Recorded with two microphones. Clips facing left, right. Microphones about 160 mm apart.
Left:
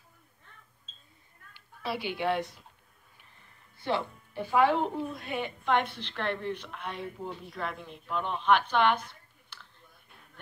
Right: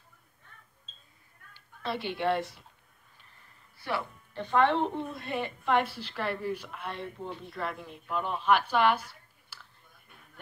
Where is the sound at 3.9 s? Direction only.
25° left (ahead or behind).